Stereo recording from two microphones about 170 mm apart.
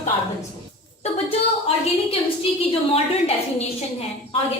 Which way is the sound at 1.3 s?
35° left (ahead or behind).